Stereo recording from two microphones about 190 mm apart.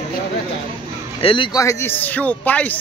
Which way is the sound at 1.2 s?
25° left (ahead or behind).